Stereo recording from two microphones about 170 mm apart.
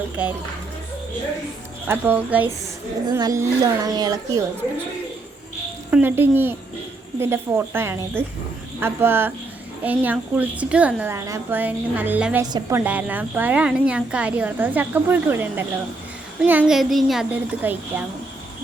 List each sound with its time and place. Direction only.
0.2 s a woman's voice: 10° right (ahead or behind)
1.9 s a woman's voice: 10° right (ahead or behind)
3.1 s speech: 20° right (ahead or behind)
5.9 s a woman's voice: 10° right (ahead or behind)